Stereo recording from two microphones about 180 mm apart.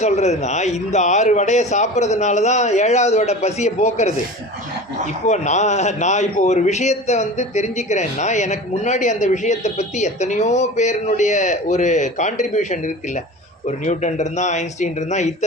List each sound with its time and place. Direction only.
0.0 s a man's voice: 40° left (ahead or behind)
5.2 s a man's voice: 40° left (ahead or behind)